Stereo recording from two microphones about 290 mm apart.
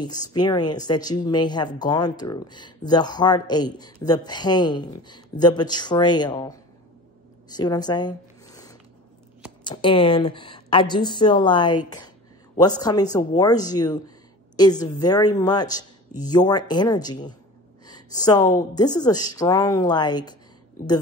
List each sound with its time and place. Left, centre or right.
0.0 s speech: centre
7.4 s zipper: centre
9.7 s speech: centre